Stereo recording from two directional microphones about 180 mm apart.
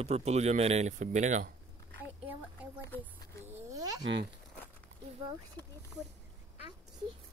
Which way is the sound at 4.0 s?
75° right (ahead or behind).